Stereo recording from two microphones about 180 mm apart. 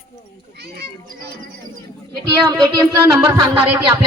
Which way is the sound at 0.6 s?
65° right (ahead or behind).